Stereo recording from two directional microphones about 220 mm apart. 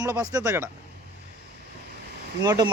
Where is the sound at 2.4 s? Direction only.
15° right (ahead or behind).